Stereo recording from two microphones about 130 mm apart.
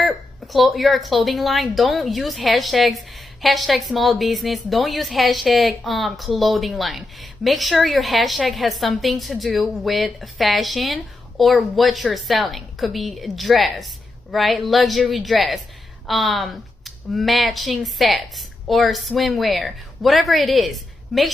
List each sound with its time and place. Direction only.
0.0 s a woman's voice: centre (ahead or behind)